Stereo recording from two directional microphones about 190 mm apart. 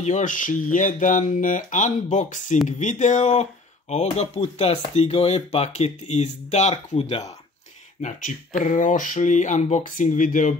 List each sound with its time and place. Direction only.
0.0 s speech: 40° left (ahead or behind)
8.5 s speech: 40° left (ahead or behind)